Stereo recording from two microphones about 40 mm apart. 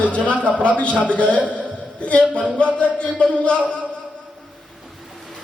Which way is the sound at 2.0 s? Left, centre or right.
Left.